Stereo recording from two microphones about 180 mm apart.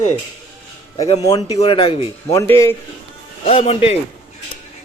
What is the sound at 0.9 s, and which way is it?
A man's voice, 35° left (ahead or behind).